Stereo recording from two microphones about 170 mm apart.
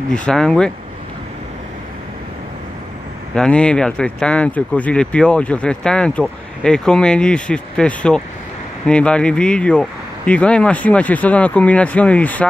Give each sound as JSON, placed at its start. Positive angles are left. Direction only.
{"t": 0.1, "sound": "speech", "side_deg": 5}
{"t": 3.3, "sound": "speech", "side_deg": 5}